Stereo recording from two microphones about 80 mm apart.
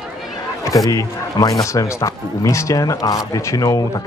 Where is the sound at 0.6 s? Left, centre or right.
Left.